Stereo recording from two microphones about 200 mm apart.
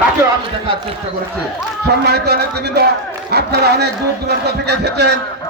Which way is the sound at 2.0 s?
55° right (ahead or behind).